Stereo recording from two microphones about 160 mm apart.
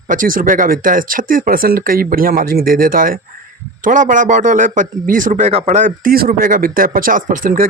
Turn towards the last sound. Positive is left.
turn(degrees=-55)  # may be behind; listen again after turning